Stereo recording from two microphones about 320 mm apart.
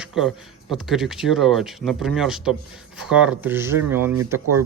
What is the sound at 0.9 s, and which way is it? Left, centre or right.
Speech, centre.